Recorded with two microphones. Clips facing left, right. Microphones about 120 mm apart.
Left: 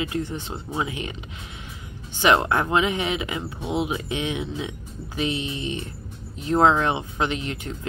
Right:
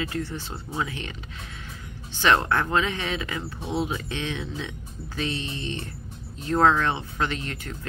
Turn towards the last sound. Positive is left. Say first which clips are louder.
# left 3 dB
turn(degrees=15)  # may be behind; listen again after turning